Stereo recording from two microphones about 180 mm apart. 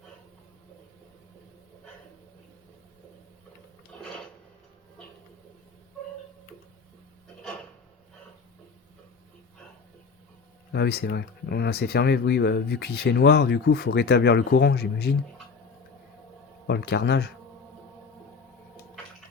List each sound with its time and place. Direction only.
3.9 s filing: 5° left (ahead or behind)
10.7 s speech: 65° left (ahead or behind)
16.6 s a man's voice: 70° left (ahead or behind)